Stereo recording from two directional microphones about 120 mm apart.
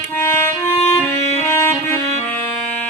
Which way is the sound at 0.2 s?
20° left (ahead or behind).